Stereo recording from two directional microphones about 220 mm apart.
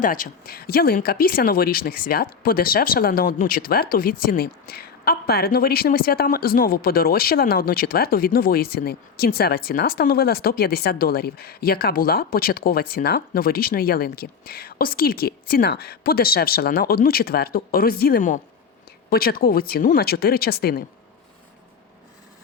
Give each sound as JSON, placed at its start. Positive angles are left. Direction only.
{"t": 0.0, "sound": "speech", "side_deg": 40}